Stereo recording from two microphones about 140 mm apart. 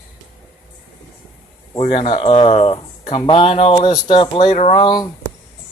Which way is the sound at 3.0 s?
35° left (ahead or behind).